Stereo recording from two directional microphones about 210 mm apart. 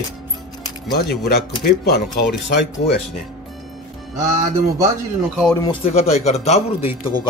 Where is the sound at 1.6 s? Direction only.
50° left (ahead or behind).